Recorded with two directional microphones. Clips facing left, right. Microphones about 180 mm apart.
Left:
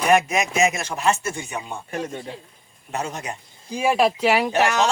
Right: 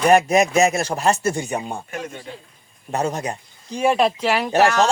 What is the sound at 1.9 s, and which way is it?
Speech, 30° left (ahead or behind).